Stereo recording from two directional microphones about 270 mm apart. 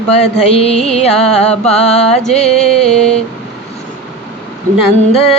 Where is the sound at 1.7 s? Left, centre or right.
Left.